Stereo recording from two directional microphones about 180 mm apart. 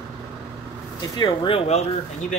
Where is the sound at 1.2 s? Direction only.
30° left (ahead or behind).